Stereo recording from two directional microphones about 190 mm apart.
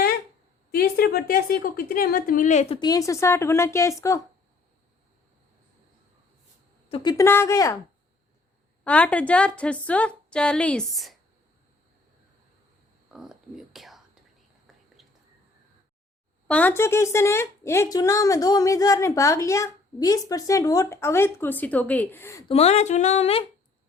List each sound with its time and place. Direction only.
0.7 s a woman's voice: 55° left (ahead or behind)
2.8 s speech: 20° left (ahead or behind)
6.8 s speech: 25° left (ahead or behind)
8.8 s speech: 5° left (ahead or behind)
13.1 s whispering: centre (ahead or behind)
16.5 s speech: 10° left (ahead or behind)
22.4 s speech: 35° left (ahead or behind)